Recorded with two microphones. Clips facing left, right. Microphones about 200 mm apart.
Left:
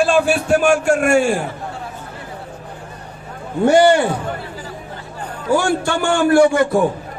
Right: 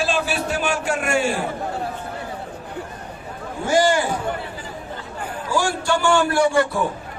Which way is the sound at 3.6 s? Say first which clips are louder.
Left 7 dB; 65° left (ahead or behind).